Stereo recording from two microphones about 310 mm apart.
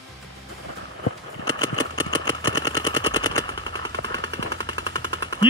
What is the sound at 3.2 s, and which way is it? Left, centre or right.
Machine gun, centre.